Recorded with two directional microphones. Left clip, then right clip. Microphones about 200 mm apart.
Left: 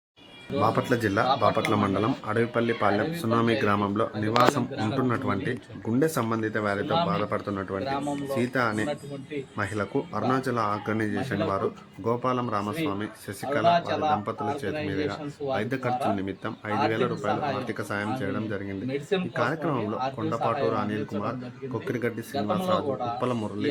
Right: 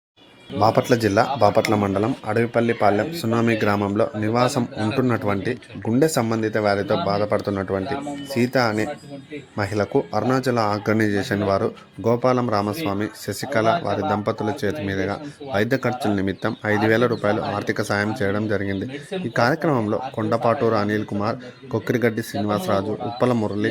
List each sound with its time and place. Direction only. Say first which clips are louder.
0.6 s speech: right 7 dB; 20° right (ahead or behind)